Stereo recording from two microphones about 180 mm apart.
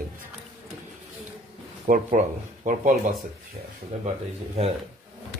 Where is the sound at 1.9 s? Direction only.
45° right (ahead or behind).